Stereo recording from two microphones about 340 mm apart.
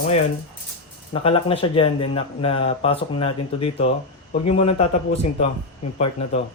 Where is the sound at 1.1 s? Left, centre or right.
Centre.